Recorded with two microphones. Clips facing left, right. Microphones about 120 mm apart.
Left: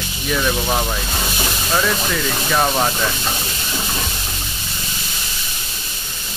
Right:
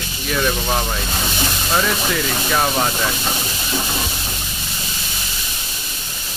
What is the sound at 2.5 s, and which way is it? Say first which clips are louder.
Speech: left 2 dB; centre (ahead or behind).